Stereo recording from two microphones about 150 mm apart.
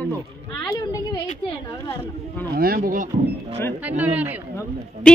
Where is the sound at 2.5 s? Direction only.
85° right; by 3.1 s 65° right (ahead or behind).